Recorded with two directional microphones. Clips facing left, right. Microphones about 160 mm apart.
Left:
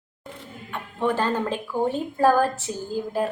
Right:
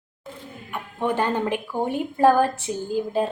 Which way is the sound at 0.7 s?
15° right (ahead or behind).